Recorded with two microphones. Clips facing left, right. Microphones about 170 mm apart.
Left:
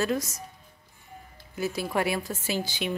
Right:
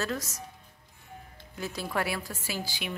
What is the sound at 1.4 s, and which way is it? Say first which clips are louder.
Music: left 7 dB; 10° left (ahead or behind).